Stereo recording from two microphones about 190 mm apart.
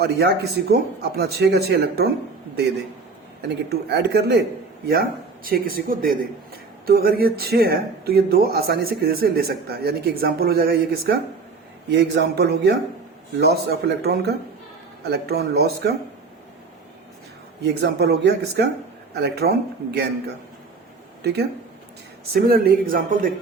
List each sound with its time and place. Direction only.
0.0 s speech: 60° right (ahead or behind)
3.5 s speech: 60° right (ahead or behind)
11.9 s speech: 65° right (ahead or behind)
17.6 s speech: 60° right (ahead or behind)
22.3 s speech: 55° right (ahead or behind)